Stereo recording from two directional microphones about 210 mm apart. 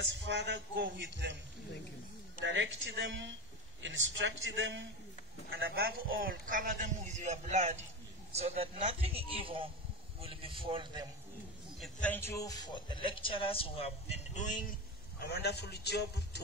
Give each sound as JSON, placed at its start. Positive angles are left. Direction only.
{"t": 0.2, "sound": "a man's voice", "side_deg": -55}
{"t": 2.4, "sound": "a man's voice", "side_deg": -60}
{"t": 11.8, "sound": "a man's voice", "side_deg": 5}
{"t": 15.1, "sound": "a man's voice", "side_deg": 50}